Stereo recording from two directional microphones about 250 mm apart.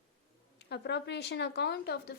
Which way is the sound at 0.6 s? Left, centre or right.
Left.